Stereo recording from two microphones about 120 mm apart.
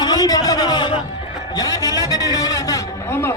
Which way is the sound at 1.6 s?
30° left (ahead or behind).